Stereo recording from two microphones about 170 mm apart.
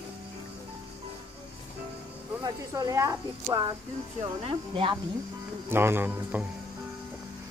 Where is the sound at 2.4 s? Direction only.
20° right (ahead or behind).